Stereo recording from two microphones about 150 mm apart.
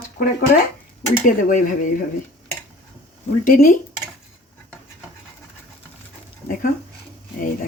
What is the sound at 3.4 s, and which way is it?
Speech, 65° left (ahead or behind).